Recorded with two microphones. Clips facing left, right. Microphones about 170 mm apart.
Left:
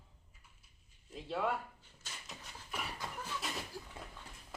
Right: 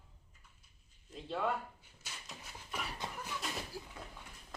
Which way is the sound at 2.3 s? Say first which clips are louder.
Even; 5° right (ahead or behind).